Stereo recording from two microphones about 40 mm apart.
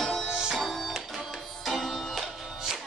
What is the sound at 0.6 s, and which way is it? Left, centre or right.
Music, centre.